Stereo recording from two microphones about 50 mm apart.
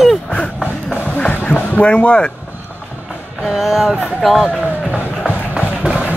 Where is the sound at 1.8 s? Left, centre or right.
Left.